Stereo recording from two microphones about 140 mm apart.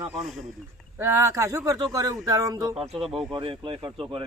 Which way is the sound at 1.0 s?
20° right (ahead or behind).